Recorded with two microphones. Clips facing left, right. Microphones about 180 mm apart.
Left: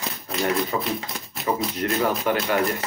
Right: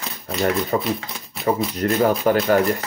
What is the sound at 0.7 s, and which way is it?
Speech, 45° right (ahead or behind).